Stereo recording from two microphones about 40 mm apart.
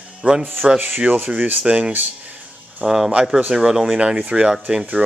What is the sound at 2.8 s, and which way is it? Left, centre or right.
Speech, centre.